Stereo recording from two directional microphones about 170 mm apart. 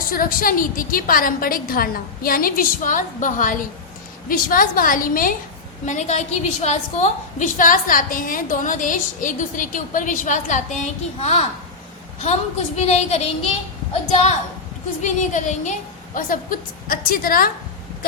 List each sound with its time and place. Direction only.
0.1 s a woman's voice: 55° left (ahead or behind)
5.8 s a woman's voice: 45° left (ahead or behind)